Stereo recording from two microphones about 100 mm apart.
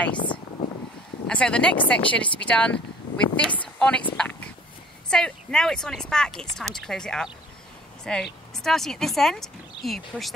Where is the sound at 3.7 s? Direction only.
10° left (ahead or behind).